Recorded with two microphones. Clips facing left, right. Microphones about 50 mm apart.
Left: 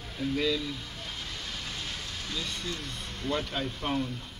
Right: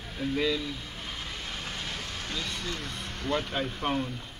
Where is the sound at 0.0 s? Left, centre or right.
Right.